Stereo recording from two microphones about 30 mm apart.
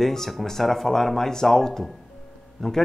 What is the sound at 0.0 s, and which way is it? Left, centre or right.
Speech, centre.